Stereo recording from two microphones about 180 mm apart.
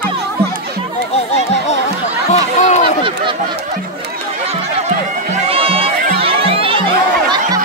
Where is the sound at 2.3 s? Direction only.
40° left (ahead or behind).